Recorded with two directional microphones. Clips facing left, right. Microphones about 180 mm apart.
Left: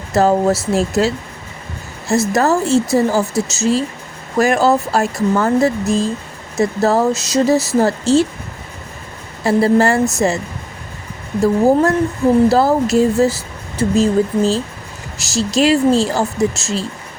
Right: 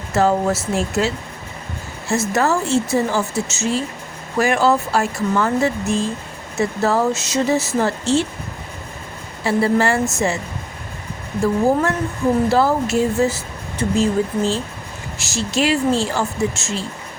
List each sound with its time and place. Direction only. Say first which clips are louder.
0.1 s speech: left 4 dB; 40° left (ahead or behind)
9.4 s speech: left 4 dB; 40° left (ahead or behind)
12.5 s speech: left 4 dB; 40° left (ahead or behind)